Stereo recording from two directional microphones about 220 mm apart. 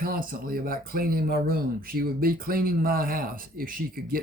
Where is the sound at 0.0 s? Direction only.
40° right (ahead or behind).